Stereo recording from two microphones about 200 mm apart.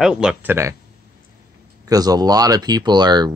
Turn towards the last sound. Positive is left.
turn(degrees=-20)  # may be behind; listen again after turning